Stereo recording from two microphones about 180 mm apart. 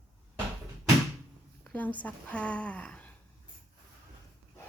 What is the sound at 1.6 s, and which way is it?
Speech, 5° left (ahead or behind).